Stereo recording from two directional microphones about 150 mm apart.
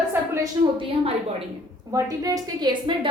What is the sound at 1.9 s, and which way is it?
A woman's voice, 25° right (ahead or behind).